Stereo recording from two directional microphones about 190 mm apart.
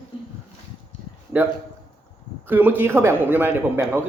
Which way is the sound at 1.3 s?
10° right (ahead or behind).